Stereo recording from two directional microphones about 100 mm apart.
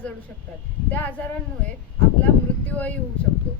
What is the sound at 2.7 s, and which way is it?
Speech, 15° left (ahead or behind).